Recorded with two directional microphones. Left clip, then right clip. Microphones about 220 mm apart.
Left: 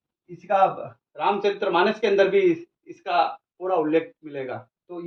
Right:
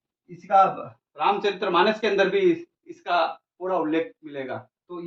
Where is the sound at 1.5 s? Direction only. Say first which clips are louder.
Even; 15° right (ahead or behind).